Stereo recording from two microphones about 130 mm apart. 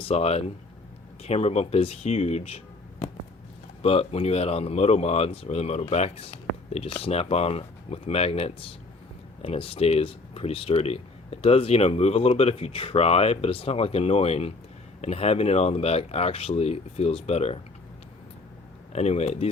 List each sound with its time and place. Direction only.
0.0 s speech: 50° left (ahead or behind)
3.8 s speech: 50° left (ahead or behind)
18.9 s speech: 55° left (ahead or behind)